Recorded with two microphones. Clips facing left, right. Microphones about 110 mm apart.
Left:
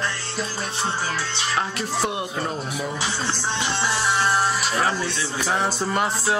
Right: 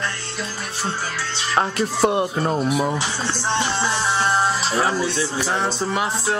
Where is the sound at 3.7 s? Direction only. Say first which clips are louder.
Right 1 dB; 25° right (ahead or behind).